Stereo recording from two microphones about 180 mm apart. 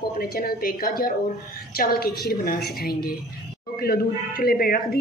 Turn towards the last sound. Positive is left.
turn(degrees=55)  # may be behind; listen again after turning